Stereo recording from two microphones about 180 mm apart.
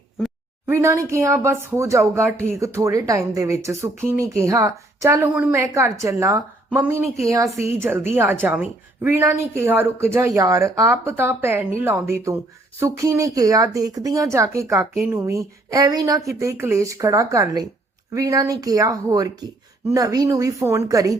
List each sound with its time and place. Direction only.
0.7 s speech: 15° right (ahead or behind)